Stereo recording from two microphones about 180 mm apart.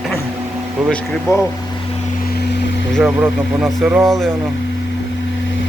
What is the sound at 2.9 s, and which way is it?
Speech, 5° right (ahead or behind).